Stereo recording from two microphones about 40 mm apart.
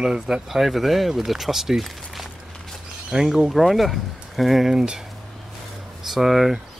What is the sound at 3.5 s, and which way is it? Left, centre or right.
Speech, centre.